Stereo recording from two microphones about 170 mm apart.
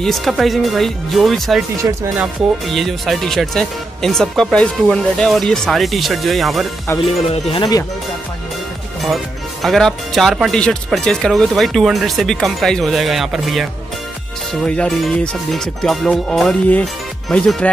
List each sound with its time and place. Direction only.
0.0 s speech: centre (ahead or behind)
1.8 s speech: 20° right (ahead or behind)
2.6 s speech: centre (ahead or behind)
7.2 s speech: 35° left (ahead or behind)
9.0 s speech: centre (ahead or behind)